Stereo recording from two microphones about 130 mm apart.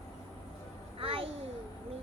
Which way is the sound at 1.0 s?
45° right (ahead or behind).